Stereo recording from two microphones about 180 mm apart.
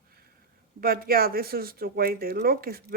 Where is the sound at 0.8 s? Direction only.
55° right (ahead or behind).